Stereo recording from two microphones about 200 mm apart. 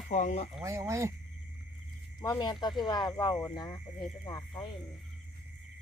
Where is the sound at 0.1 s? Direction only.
40° left (ahead or behind).